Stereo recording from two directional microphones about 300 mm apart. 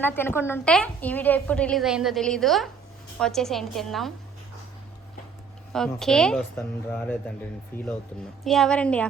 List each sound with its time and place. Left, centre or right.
0.0 s a woman's voice: centre
5.7 s a woman's voice: centre